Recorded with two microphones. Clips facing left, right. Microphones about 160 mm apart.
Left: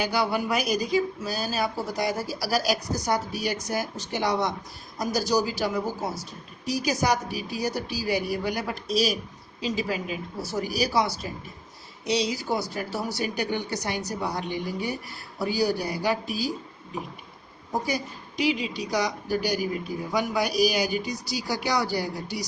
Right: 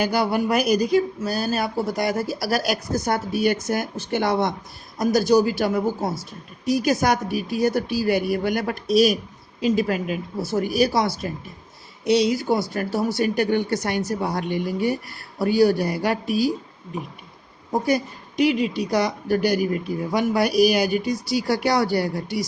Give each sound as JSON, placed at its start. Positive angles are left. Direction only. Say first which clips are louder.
{"t": 0.0, "sound": "a woman's voice", "louder": "right 4 dB", "side_deg": -55}
{"t": 17.8, "sound": "a woman's voice", "louder": "right 8 dB", "side_deg": -55}